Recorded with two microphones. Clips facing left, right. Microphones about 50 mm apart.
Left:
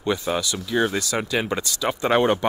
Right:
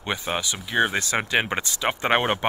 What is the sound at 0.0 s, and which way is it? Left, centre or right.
Speech, right.